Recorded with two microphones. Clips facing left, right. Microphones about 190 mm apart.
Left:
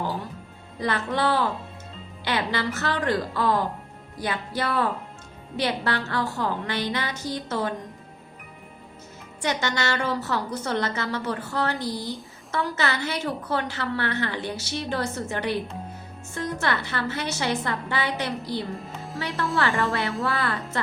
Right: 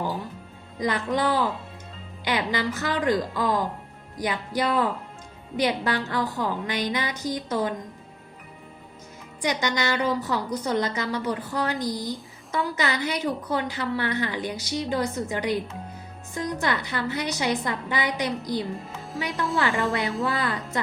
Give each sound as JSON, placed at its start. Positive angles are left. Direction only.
{"t": 0.8, "sound": "a woman's voice", "side_deg": -15}
{"t": 9.4, "sound": "a woman's voice", "side_deg": -15}
{"t": 18.8, "sound": "speech", "side_deg": 0}
{"t": 19.5, "sound": "a woman's voice", "side_deg": -20}